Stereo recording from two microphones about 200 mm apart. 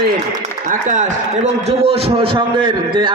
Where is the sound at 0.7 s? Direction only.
40° right (ahead or behind).